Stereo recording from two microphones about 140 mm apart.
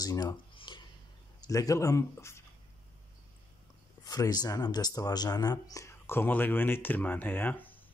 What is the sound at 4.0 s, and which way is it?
Speech, 25° left (ahead or behind).